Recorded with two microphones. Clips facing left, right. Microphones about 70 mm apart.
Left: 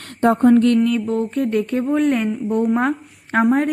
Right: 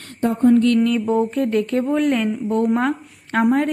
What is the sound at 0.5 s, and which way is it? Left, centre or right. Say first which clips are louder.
Mantra: left 1 dB; left.